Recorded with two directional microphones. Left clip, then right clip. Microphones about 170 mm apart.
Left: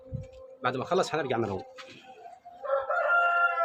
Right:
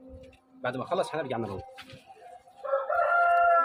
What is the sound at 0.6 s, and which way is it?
Speech, 50° left (ahead or behind).